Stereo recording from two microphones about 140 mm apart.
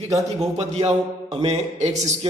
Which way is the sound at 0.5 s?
50° right (ahead or behind).